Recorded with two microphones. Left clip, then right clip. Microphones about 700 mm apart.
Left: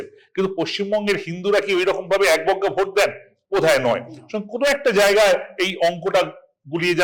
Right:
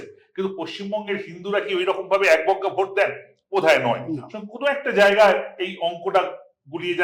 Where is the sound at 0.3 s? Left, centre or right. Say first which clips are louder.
Left 6 dB; left.